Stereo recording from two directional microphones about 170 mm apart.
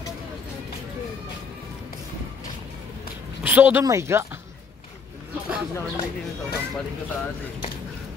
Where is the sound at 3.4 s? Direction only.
10° right (ahead or behind).